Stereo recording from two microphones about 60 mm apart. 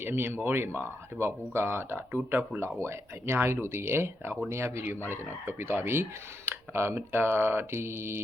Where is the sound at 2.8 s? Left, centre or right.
Right.